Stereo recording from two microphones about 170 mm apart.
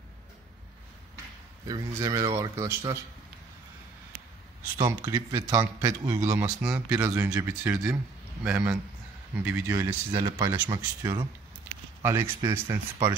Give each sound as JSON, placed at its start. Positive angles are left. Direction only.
{"t": 1.7, "sound": "speech", "side_deg": -20}
{"t": 4.7, "sound": "speech", "side_deg": -25}
{"t": 10.2, "sound": "speech", "side_deg": -25}